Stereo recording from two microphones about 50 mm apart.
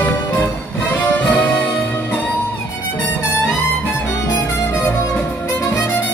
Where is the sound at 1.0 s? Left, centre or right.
Left.